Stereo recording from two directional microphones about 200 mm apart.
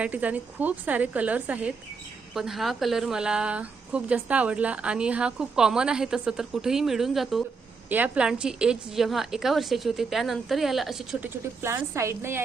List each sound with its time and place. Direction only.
0.0 s a woman's voice: 5° right (ahead or behind)
11.6 s a woman's voice: 15° right (ahead or behind)